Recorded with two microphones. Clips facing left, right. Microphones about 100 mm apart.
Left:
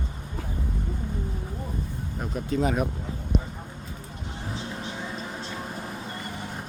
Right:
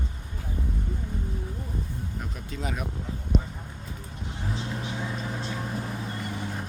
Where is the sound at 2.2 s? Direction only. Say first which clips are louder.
Left 14 dB; 35° left (ahead or behind).